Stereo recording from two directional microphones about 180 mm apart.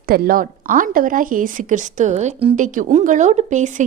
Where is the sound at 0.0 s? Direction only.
55° right (ahead or behind).